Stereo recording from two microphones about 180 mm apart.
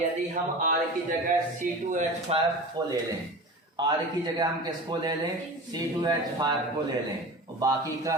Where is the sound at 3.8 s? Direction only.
25° right (ahead or behind).